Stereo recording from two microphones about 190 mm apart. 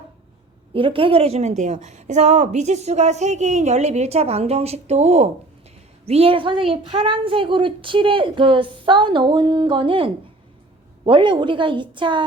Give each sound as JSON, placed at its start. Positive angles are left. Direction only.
{"t": 0.7, "sound": "a woman's voice", "side_deg": -25}